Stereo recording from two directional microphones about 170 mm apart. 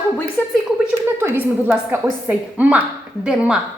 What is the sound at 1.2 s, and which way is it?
A woman's voice, 10° right (ahead or behind).